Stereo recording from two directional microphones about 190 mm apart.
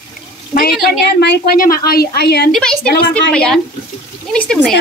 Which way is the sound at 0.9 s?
60° left (ahead or behind).